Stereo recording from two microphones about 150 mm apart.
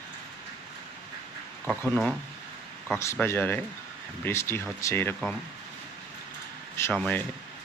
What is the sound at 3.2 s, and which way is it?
Speech, 15° left (ahead or behind).